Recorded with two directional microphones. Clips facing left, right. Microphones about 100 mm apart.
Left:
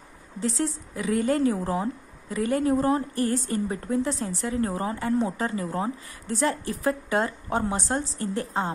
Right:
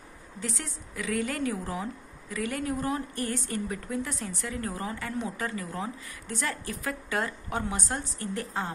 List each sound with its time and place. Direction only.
0.4 s a woman's voice: 30° left (ahead or behind)